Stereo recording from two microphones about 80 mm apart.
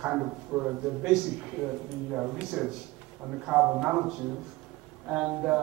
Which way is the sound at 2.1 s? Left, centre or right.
Centre.